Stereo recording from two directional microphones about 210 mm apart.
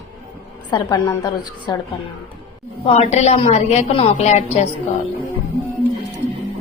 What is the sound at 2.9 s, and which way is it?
A woman's voice, 30° left (ahead or behind).